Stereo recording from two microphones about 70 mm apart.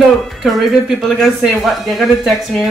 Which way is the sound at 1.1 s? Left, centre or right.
Centre.